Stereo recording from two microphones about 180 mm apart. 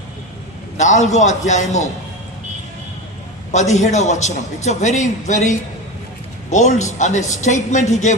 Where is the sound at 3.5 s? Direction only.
40° left (ahead or behind).